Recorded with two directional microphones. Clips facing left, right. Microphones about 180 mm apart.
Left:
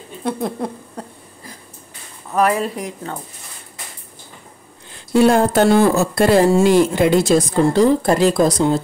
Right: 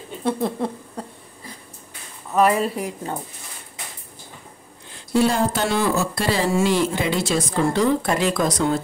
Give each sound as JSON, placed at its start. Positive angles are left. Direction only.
{"t": 0.2, "sound": "speech", "side_deg": 0}
{"t": 2.3, "sound": "a woman's voice", "side_deg": 0}
{"t": 5.1, "sound": "speech", "side_deg": 55}